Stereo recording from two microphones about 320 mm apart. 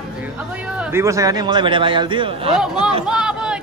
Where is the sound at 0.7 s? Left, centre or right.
Centre.